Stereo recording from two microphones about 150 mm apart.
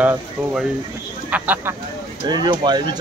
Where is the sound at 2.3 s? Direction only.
30° right (ahead or behind).